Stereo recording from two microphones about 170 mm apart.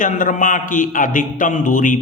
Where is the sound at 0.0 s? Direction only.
50° left (ahead or behind).